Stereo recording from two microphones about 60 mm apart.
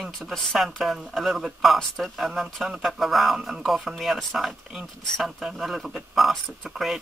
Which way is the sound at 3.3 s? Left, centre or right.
Centre.